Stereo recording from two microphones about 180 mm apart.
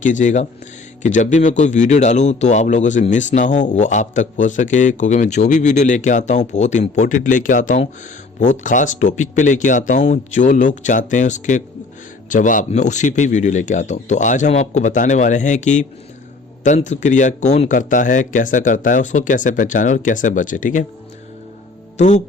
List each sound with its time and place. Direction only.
0.0 s a man's voice: 45° left (ahead or behind)
21.9 s speech: 40° left (ahead or behind)